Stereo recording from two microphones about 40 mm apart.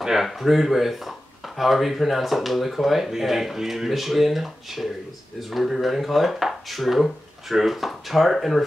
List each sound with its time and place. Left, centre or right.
0.0 s speech: centre